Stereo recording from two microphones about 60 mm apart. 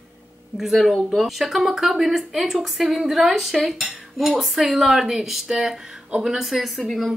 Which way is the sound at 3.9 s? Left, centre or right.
Centre.